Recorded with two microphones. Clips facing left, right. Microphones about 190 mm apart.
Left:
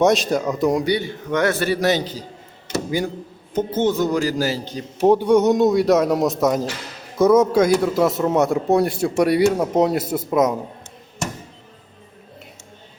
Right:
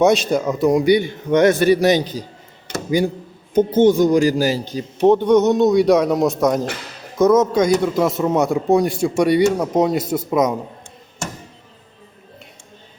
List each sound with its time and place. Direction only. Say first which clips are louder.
0.0 s a man's voice: right 2 dB; centre (ahead or behind)
0.9 s a man's voice: right 6 dB; 15° right (ahead or behind)
3.5 s a man's voice: right 6 dB; 15° right (ahead or behind)
4.9 s a man's voice: right 2 dB; 10° left (ahead or behind)